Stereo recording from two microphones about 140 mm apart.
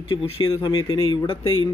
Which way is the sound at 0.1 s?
35° left (ahead or behind).